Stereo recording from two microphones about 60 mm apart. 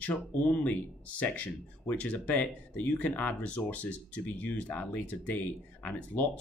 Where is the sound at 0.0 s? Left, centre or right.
Left.